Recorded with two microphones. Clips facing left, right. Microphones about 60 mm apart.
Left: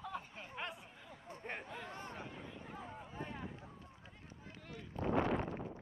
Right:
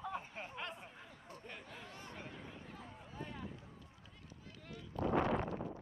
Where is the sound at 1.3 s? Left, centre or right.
Left.